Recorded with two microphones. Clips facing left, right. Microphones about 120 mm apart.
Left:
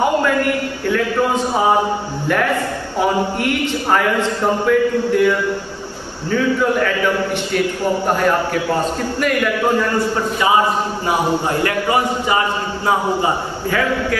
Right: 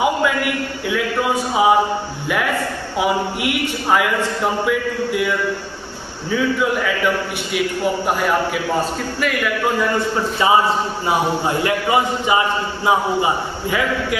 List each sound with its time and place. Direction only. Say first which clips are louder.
0.0 s a man's voice: left 2 dB; 10° right (ahead or behind)
3.0 s a man's voice: left 2 dB; 10° right (ahead or behind)
6.3 s a man's voice: left 2 dB; 5° right (ahead or behind)
9.2 s a man's voice: left 3 dB; centre (ahead or behind)
11.1 s a man's voice: left 1 dB; 20° right (ahead or behind)